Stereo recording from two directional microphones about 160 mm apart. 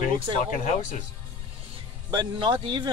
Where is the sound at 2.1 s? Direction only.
30° right (ahead or behind).